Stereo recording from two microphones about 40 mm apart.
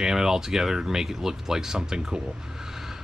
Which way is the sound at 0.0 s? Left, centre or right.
Centre.